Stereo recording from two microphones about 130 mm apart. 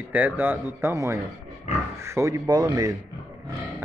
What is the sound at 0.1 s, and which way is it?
Speech, 15° right (ahead or behind).